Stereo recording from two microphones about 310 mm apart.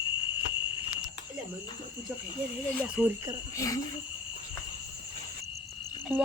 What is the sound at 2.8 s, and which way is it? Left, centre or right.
Speech, centre.